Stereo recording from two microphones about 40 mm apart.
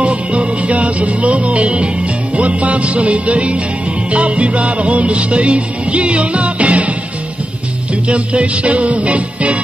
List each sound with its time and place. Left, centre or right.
0.0 s music: right
8.1 s music: right